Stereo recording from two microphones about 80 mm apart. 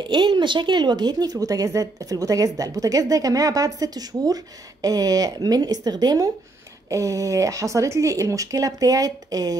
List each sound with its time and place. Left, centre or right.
0.0 s a woman's voice: right
6.9 s a woman's voice: right